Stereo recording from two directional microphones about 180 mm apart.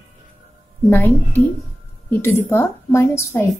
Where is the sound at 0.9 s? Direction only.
10° left (ahead or behind).